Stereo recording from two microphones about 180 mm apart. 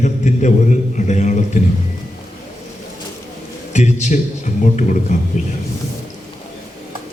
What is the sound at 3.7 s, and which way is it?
A man's voice, 40° left (ahead or behind).